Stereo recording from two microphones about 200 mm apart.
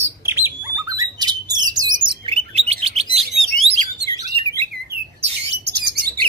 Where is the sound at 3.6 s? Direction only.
30° right (ahead or behind).